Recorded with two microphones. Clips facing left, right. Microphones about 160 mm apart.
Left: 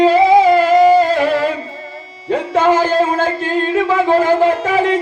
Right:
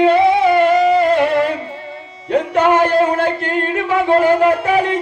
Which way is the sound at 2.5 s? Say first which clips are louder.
Left 1 dB; 90° left.